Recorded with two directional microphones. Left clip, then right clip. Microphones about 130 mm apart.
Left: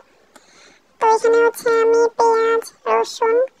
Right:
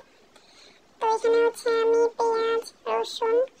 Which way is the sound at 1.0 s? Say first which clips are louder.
Left 8 dB; 40° left (ahead or behind).